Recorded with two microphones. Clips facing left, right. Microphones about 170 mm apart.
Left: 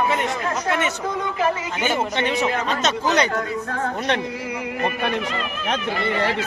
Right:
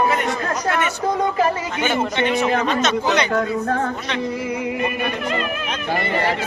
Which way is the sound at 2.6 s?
35° left (ahead or behind).